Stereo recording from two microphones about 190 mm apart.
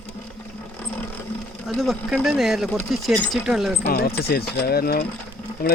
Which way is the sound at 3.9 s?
55° left (ahead or behind).